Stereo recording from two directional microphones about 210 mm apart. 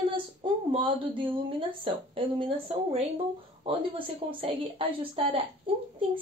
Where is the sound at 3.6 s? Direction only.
25° right (ahead or behind).